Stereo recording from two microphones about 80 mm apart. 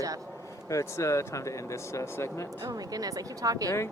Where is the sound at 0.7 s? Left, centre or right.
Left.